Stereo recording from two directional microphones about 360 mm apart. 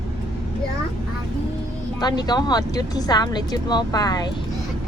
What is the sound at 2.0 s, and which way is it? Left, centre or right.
Speech, centre.